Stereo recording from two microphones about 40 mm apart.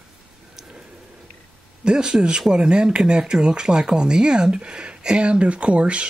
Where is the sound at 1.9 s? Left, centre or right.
Centre.